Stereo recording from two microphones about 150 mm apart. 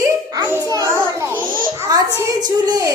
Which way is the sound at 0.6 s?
20° right (ahead or behind).